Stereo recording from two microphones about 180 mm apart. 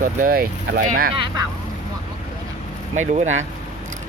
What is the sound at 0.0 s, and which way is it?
Speech, 50° right (ahead or behind).